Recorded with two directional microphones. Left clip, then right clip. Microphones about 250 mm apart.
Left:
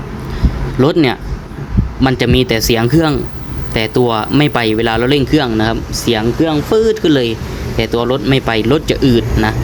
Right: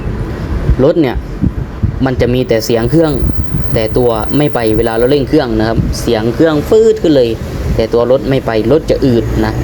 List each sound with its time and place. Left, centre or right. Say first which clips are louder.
0.8 s speech: right 2 dB; left